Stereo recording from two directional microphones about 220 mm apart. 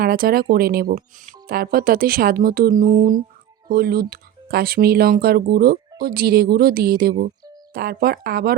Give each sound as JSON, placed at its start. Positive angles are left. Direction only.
{"t": 0.0, "sound": "speech", "side_deg": -40}
{"t": 7.1, "sound": "speech", "side_deg": -20}
{"t": 7.7, "sound": "speech", "side_deg": -45}